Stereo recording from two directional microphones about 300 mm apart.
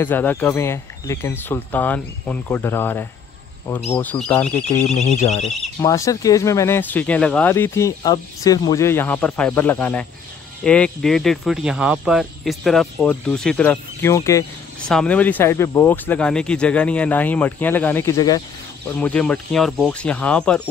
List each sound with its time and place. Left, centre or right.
0.0 s speech: centre
5.1 s speech: left
5.4 s speech: centre